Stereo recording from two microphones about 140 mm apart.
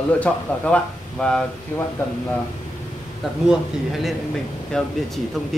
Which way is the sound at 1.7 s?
15° left (ahead or behind).